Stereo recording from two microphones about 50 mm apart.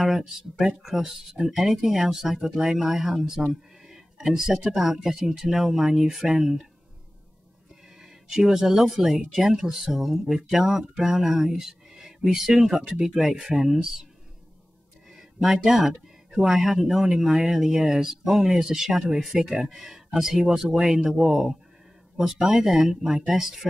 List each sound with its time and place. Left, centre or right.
0.0 s speech: centre
8.0 s speech: centre
15.1 s speech: centre